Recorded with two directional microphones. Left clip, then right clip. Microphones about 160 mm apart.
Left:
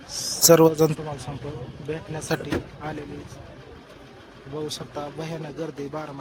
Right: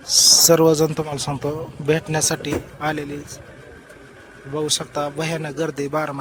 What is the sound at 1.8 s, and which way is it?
A man's voice, 45° right (ahead or behind).